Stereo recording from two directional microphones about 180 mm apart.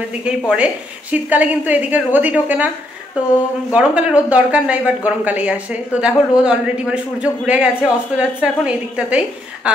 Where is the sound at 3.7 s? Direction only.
5° right (ahead or behind).